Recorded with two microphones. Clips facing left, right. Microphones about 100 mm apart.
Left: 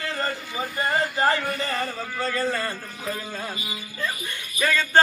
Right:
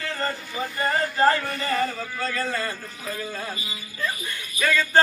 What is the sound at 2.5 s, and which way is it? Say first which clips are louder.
A man's voice: left 1 dB; 30° left (ahead or behind).